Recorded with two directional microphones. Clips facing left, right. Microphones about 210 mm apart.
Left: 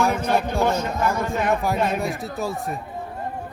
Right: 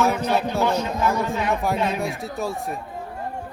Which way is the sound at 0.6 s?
50° left (ahead or behind).